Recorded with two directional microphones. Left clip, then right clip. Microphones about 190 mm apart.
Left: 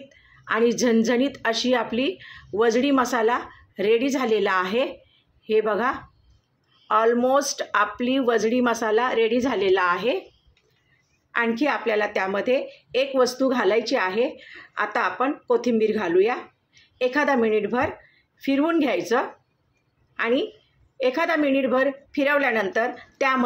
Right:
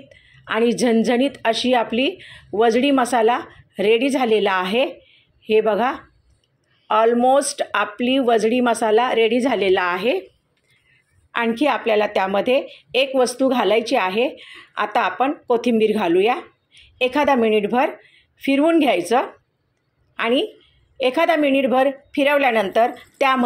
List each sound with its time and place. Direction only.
0.1 s a woman's voice: 10° right (ahead or behind)
11.3 s a woman's voice: 15° right (ahead or behind)